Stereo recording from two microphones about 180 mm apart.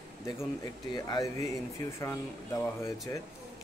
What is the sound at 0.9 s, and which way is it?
Speech, 20° left (ahead or behind).